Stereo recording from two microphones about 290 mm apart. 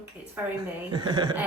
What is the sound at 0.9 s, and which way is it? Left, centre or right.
Speech, centre.